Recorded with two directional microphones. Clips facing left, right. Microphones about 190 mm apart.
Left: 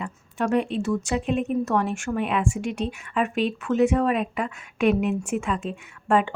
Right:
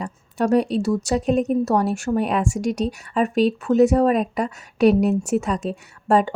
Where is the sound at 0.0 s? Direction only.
40° right (ahead or behind).